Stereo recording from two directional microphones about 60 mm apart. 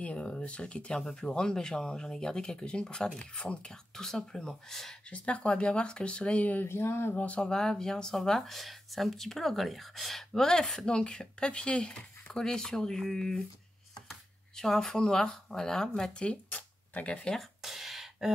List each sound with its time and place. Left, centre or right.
0.0 s speech: left
5.1 s speech: centre
6.7 s a sound: left
7.2 s speech: left
7.4 s speech: centre
14.6 s speech: centre
17.4 s a sound: centre